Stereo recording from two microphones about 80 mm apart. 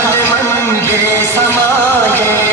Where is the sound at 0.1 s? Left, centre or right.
Left.